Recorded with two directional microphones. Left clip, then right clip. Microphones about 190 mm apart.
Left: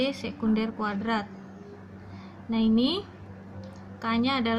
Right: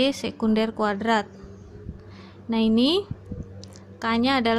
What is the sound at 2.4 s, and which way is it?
A woman's voice, 55° right (ahead or behind).